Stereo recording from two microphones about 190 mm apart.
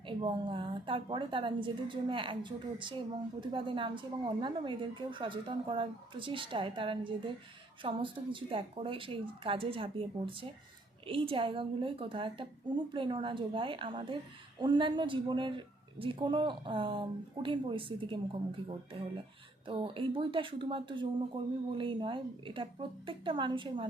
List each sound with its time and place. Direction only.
0.2 s speech: 25° right (ahead or behind)